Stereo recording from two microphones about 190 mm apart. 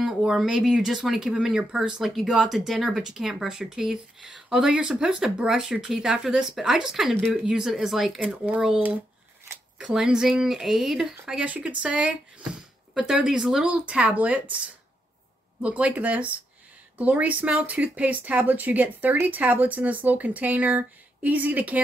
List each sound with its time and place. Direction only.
0.0 s speech: centre (ahead or behind)
9.8 s speech: centre (ahead or behind)
15.6 s speech: 5° right (ahead or behind)